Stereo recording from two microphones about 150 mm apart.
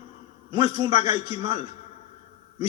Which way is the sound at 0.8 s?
30° right (ahead or behind).